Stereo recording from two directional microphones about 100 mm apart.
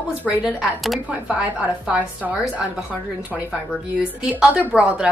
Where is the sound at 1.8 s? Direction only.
15° right (ahead or behind).